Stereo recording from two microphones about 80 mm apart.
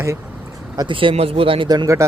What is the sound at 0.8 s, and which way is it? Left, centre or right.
Speech, right.